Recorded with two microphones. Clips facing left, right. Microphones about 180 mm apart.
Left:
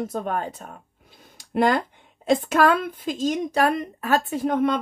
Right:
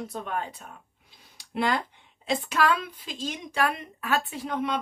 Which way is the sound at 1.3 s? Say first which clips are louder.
Left 6 dB; 50° left (ahead or behind).